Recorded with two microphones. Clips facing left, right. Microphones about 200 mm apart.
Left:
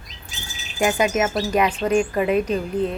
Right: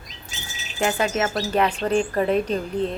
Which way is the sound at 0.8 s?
15° left (ahead or behind).